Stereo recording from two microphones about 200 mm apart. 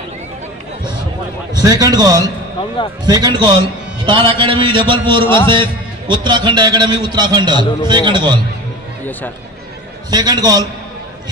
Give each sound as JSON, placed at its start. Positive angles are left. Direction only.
{"t": 1.5, "sound": "a man's voice", "side_deg": -20}
{"t": 10.1, "sound": "a man's voice", "side_deg": -20}